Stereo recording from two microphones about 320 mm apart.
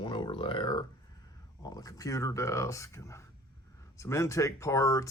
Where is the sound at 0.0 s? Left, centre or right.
Centre.